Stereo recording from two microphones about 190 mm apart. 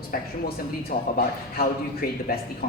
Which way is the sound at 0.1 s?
55° left (ahead or behind).